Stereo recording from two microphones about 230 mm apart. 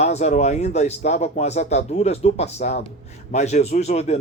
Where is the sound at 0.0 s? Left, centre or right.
Left.